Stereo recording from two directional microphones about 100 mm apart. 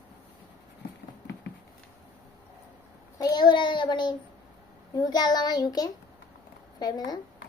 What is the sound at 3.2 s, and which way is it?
Child singing, 45° left (ahead or behind).